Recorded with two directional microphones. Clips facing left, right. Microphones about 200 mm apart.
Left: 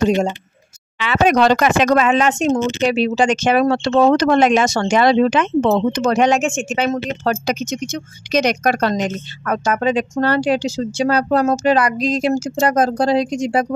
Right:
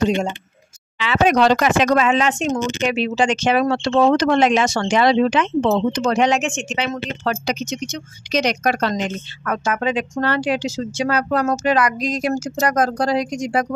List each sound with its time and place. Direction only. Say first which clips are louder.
0.9 s speech: left 1 dB; 55° left (ahead or behind); by 13.7 s 25° left (ahead or behind)